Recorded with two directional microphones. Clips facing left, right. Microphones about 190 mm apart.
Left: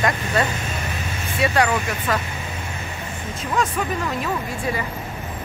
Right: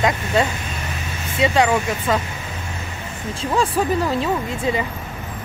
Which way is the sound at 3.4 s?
30° right (ahead or behind).